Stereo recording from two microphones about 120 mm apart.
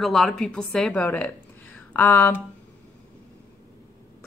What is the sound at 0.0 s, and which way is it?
A woman's voice, centre (ahead or behind).